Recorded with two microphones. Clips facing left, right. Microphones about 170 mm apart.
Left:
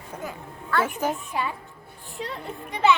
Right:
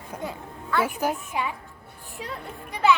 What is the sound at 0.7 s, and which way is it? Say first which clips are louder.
A woman's voice: even; 10° right (ahead or behind).